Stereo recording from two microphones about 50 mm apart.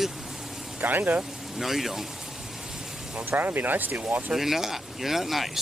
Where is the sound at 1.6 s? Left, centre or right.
Centre.